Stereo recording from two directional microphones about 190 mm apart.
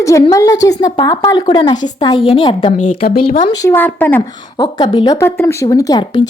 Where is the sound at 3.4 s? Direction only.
20° left (ahead or behind).